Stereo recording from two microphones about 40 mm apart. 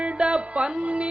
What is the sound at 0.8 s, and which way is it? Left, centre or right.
Speech, right.